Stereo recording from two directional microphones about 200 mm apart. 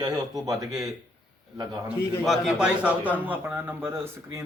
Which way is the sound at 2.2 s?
Centre (ahead or behind).